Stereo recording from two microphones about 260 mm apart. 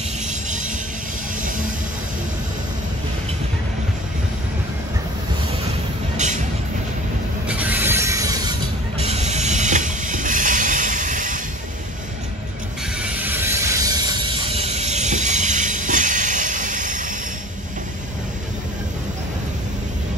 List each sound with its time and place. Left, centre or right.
0.3 s music: right
6.1 s vehicle: right
7.4 s music: centre; by 11.4 s right
13.0 s train: centre
14.8 s train: right